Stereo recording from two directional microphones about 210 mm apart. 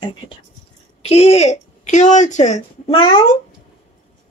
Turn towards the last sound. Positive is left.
turn(degrees=25)  # may be behind; listen again after turning